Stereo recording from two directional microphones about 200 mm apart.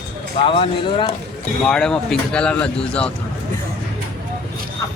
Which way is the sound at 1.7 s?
5° left (ahead or behind).